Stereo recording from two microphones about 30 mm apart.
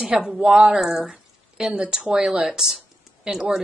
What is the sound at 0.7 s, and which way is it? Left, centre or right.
Speech, centre.